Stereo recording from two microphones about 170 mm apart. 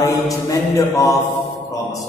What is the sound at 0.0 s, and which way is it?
Mantra, 20° left (ahead or behind).